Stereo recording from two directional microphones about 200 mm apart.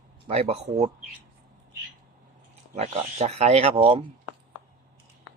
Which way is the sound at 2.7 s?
30° right (ahead or behind).